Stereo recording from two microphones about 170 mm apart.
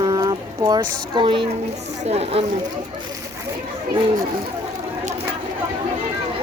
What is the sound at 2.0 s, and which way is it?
Speech, 35° right (ahead or behind).